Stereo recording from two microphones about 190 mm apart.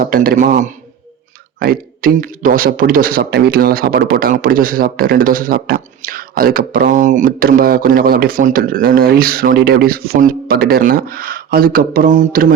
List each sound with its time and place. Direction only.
0.0 s a man's voice: 50° right (ahead or behind)